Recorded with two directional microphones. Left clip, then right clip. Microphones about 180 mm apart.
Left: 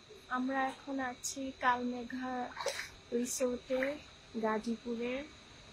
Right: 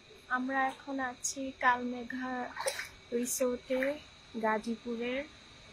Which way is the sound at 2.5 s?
55° right (ahead or behind).